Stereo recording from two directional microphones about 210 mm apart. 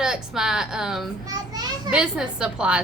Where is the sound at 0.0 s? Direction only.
5° right (ahead or behind).